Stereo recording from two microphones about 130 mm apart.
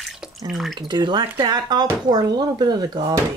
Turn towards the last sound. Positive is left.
turn(degrees=-30)  # may be behind; listen again after turning